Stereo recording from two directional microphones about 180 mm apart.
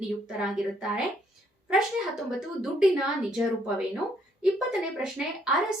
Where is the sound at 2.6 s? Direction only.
5° right (ahead or behind).